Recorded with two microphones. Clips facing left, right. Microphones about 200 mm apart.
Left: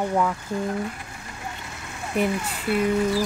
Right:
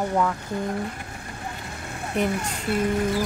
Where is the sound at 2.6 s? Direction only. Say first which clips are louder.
Left 2 dB; 45° right (ahead or behind).